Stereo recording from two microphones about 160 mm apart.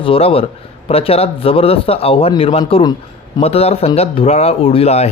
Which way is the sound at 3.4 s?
40° left (ahead or behind).